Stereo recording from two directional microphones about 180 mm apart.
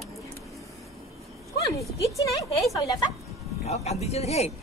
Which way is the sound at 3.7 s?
35° left (ahead or behind).